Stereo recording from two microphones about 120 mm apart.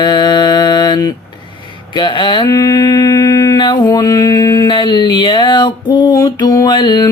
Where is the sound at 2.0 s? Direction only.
40° left (ahead or behind).